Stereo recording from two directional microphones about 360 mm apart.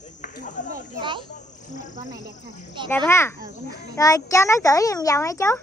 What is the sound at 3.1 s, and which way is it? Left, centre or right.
A child's voice, centre.